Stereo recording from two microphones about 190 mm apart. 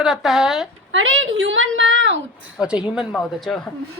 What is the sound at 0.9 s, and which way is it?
A woman's voice, 90° right.